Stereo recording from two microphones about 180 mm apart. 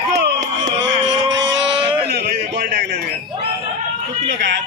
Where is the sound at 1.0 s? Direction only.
90° right.